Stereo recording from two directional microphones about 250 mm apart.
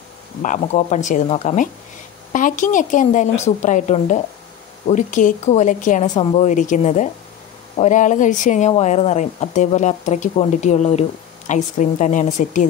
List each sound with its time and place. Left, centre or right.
0.4 s a woman's voice: left